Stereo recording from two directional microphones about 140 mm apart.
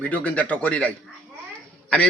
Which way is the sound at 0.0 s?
10° left (ahead or behind).